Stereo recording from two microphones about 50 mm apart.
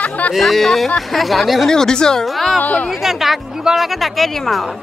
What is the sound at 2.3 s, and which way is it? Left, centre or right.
Speech, centre.